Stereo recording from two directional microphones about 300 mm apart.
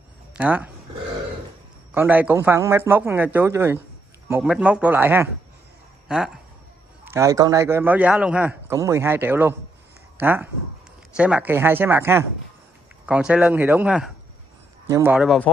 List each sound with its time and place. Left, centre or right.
0.3 s speech: centre
2.0 s a man's voice: centre